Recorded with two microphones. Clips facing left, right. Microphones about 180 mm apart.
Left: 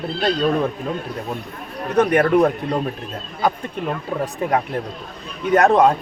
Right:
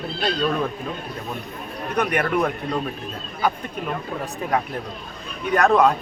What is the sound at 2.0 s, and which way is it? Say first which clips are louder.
Speech: left 7 dB; 30° left (ahead or behind).